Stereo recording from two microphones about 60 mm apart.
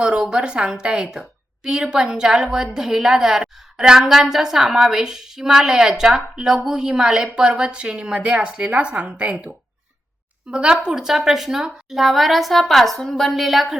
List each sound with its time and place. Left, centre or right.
0.0 s a woman's voice: centre
10.5 s a woman's voice: centre